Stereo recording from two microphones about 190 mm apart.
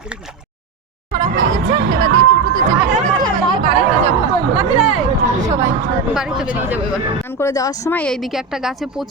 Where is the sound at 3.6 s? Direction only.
30° right (ahead or behind).